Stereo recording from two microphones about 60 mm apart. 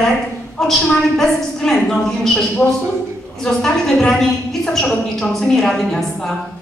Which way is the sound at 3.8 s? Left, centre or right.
Centre.